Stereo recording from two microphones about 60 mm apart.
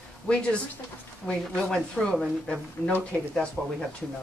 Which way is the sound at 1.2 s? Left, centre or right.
Centre.